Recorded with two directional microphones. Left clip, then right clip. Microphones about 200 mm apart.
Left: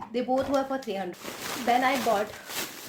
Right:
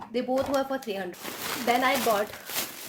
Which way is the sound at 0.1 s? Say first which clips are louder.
Even; 10° right (ahead or behind).